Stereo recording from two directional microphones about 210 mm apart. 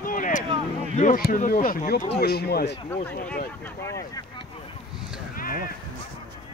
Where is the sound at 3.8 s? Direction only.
15° left (ahead or behind).